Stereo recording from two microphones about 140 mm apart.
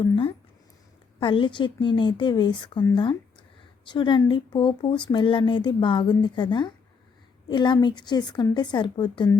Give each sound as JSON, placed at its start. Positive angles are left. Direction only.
{"t": 0.0, "sound": "speech", "side_deg": 40}